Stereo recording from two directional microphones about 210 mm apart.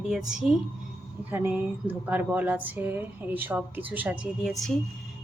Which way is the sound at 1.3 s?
10° right (ahead or behind).